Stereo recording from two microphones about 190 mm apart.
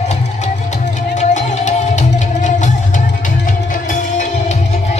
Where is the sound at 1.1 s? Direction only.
40° left (ahead or behind).